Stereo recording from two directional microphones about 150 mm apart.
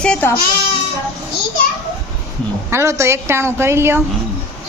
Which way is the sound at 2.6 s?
20° right (ahead or behind).